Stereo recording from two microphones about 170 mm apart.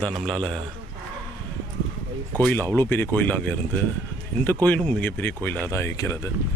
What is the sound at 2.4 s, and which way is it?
Speech, 10° left (ahead or behind).